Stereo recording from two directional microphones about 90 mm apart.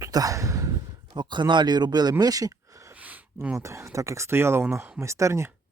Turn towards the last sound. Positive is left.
turn(degrees=-35)  # may be behind; listen again after turning